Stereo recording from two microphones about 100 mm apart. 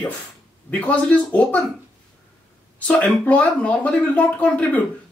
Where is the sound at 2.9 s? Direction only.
15° left (ahead or behind).